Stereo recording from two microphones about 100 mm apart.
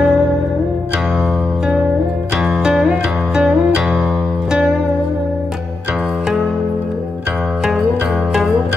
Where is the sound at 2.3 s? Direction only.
5° right (ahead or behind).